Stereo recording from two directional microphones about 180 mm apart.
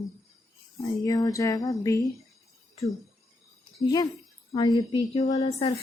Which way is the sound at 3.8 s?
20° left (ahead or behind).